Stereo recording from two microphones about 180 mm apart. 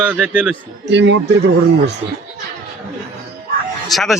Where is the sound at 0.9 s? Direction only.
80° right.